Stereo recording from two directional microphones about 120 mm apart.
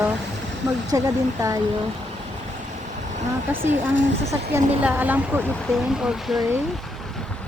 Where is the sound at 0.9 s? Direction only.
30° right (ahead or behind).